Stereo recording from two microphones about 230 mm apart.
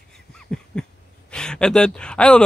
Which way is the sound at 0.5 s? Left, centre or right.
Centre.